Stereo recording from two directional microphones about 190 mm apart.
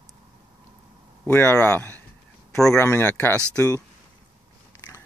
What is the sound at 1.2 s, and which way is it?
Speech, 10° left (ahead or behind).